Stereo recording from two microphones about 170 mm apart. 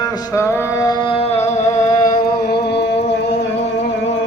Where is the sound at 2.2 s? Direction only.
65° left (ahead or behind).